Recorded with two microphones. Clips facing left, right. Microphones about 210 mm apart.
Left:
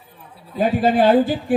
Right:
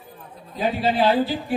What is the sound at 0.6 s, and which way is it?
Speech, 50° left (ahead or behind).